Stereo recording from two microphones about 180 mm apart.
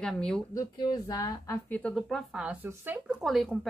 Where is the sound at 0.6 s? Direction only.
20° left (ahead or behind).